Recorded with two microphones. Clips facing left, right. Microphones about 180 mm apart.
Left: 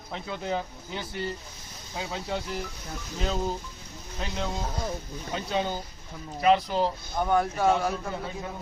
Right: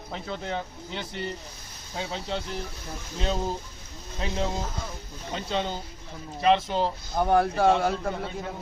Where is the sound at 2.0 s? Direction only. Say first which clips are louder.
Right 1 dB; 25° right (ahead or behind).